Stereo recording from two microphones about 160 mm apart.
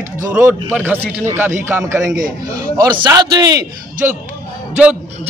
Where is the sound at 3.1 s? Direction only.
25° right (ahead or behind).